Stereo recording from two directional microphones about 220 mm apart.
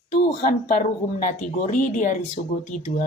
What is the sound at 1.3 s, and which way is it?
Speech, 35° left (ahead or behind).